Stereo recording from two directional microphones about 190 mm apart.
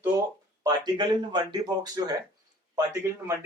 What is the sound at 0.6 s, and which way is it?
Speech, 20° right (ahead or behind).